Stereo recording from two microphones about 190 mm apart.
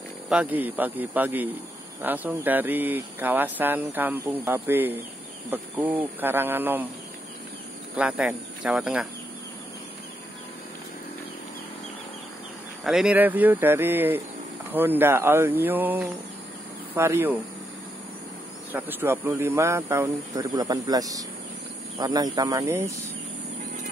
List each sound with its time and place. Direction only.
0.3 s speech: 5° right (ahead or behind)
7.9 s speech: 5° right (ahead or behind)
12.8 s speech: 5° right (ahead or behind)
18.7 s speech: 10° right (ahead or behind)